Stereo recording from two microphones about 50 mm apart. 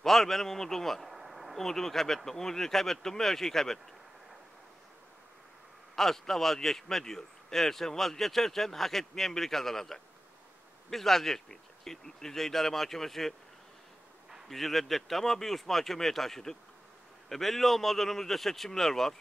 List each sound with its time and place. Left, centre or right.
0.0 s speech: centre
1.1 s a sound: centre
1.6 s a man's voice: centre
5.9 s a man's voice: centre
14.5 s speech: centre